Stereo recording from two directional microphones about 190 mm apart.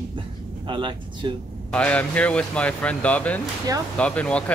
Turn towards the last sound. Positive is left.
turn(degrees=5)  # may be behind; listen again after turning